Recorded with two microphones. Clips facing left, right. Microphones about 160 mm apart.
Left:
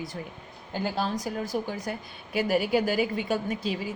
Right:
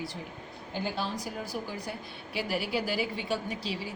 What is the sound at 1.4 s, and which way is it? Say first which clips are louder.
A woman's voice: left 6 dB; 45° left (ahead or behind).